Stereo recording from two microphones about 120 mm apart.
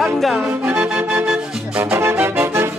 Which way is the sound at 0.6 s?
10° right (ahead or behind).